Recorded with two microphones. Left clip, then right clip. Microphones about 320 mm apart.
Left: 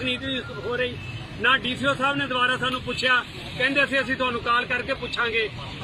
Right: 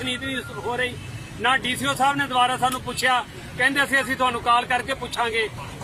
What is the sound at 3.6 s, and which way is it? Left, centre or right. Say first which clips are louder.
Speech: right 2 dB; right.